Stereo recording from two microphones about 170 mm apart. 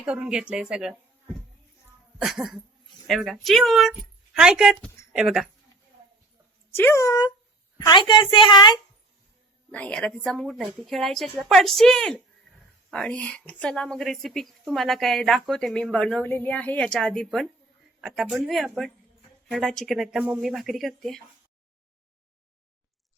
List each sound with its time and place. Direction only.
0.0 s a woman's voice: 5° right (ahead or behind)
2.1 s cough: centre (ahead or behind)
3.1 s a woman's voice: centre (ahead or behind)
6.7 s a child's voice: 15° left (ahead or behind)
9.7 s a woman's voice: 5° left (ahead or behind)